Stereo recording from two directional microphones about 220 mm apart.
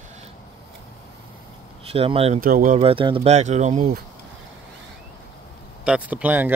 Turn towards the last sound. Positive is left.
turn(degrees=-10)  # may be behind; listen again after turning